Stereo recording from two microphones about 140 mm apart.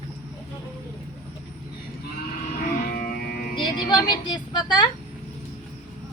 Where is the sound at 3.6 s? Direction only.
30° left (ahead or behind).